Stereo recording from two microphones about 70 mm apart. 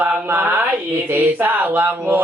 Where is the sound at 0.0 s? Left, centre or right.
Right.